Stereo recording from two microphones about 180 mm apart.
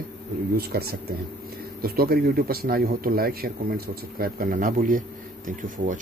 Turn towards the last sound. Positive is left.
turn(degrees=-45)  # may be behind; listen again after turning